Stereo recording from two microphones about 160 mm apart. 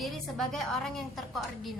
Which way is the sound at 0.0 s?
Centre (ahead or behind).